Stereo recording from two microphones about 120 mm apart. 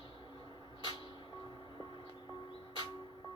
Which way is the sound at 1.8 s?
40° left (ahead or behind).